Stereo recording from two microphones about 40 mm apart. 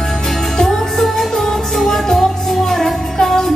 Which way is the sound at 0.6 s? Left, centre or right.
Centre.